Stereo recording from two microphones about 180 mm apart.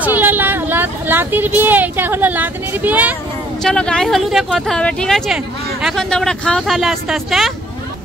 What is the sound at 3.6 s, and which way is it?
Speech, 5° left (ahead or behind).